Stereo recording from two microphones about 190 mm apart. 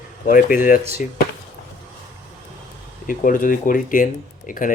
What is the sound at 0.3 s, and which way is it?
Speech, 45° left (ahead or behind).